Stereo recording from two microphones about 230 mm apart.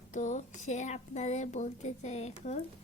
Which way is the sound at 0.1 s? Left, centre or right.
Left.